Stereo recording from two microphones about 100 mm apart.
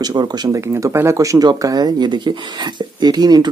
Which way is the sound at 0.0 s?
45° right (ahead or behind).